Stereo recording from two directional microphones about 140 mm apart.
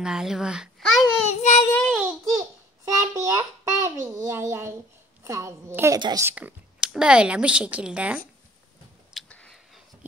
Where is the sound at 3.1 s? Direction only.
25° right (ahead or behind); by 8.1 s 5° right (ahead or behind).